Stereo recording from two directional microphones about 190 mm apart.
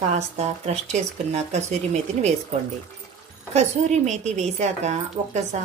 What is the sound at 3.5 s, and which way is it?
A woman's voice, 35° right (ahead or behind).